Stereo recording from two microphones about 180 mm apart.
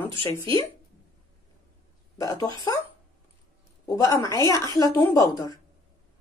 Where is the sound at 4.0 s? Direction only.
20° left (ahead or behind).